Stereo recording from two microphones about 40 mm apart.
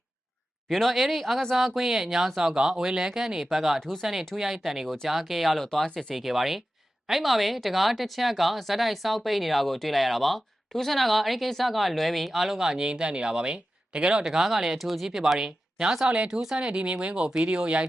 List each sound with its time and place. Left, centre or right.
0.7 s speech: centre
3.8 s speech: centre
4.0 s speech: centre
5.9 s speech: centre
6.1 s speech: centre; by 14.3 s right
14.3 s speech: centre
15.0 s speech: centre; by 16.3 s right
16.3 s speech: centre
16.6 s speech: right